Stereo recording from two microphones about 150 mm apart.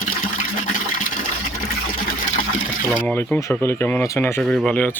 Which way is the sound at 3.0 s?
10° left (ahead or behind).